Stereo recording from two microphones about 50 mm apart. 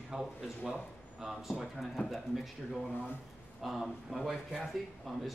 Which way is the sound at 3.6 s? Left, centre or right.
Centre.